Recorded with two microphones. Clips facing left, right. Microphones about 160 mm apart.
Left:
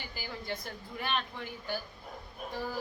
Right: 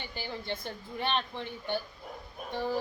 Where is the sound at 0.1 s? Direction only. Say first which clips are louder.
Right 2 dB; 25° right (ahead or behind).